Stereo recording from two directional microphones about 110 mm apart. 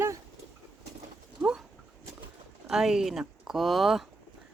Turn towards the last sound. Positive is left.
turn(degrees=0)  # may be behind; listen again after turning